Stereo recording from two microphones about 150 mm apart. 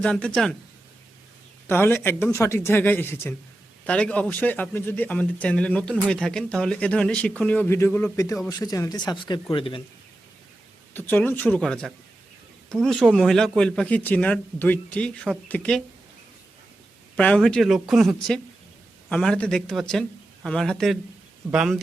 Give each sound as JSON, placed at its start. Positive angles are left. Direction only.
{"t": 0.0, "sound": "speech", "side_deg": 5}
{"t": 1.6, "sound": "a man's voice", "side_deg": 15}
{"t": 10.9, "sound": "a man's voice", "side_deg": 15}
{"t": 17.2, "sound": "speech", "side_deg": 5}
{"t": 19.1, "sound": "speech", "side_deg": 5}